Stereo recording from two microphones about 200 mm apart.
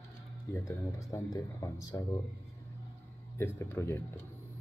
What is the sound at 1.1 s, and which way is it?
Speech, 15° left (ahead or behind).